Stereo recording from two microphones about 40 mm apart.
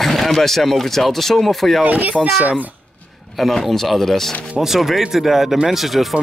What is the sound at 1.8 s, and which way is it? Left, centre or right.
Speech, right.